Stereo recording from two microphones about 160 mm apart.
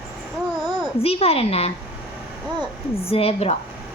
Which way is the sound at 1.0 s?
40° left (ahead or behind).